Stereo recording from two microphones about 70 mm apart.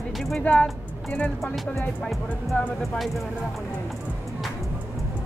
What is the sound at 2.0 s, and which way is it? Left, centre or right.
Speech, centre.